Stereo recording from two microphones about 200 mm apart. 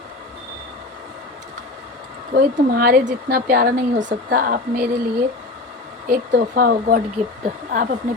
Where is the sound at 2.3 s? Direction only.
50° right (ahead or behind).